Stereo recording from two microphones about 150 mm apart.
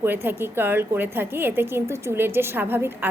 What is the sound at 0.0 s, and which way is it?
A woman's voice, 15° right (ahead or behind).